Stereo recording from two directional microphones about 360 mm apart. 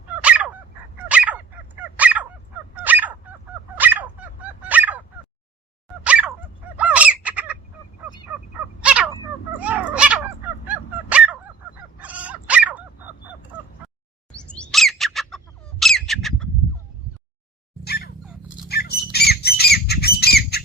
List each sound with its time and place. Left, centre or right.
0.2 s dog: centre
2.7 s fowl: centre
3.8 s dog: centre
6.1 s dog: centre
6.7 s bird: centre
8.8 s crow: centre
9.6 s a sound: centre
10.7 s honk: centre
11.9 s dog: centre
14.4 s bird: centre
15.8 s squawk: centre
17.8 s dog: left
18.7 s squawk: left